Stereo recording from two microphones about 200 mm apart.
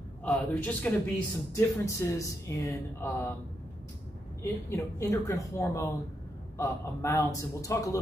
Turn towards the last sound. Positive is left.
turn(degrees=15)  # may be behind; listen again after turning